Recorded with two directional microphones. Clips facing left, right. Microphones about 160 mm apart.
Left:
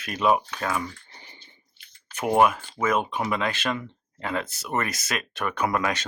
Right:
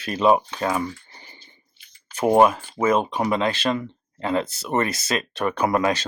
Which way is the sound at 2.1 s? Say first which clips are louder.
Right 4 dB; 30° right (ahead or behind).